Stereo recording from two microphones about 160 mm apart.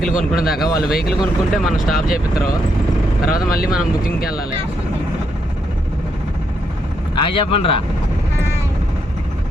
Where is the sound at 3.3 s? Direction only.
70° left (ahead or behind).